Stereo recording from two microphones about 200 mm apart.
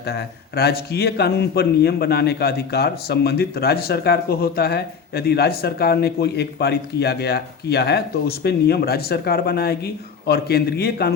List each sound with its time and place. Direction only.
0.1 s a man's voice: 50° left (ahead or behind)